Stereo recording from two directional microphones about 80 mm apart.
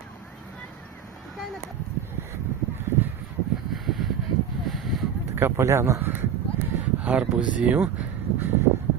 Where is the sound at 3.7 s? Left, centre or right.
Centre.